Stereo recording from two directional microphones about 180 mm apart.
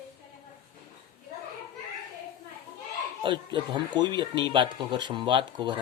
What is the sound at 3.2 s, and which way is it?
Speech, 25° right (ahead or behind).